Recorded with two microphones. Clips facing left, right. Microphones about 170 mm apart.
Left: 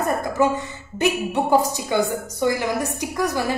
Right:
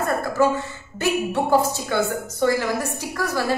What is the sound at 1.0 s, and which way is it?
A woman's voice, 15° left (ahead or behind).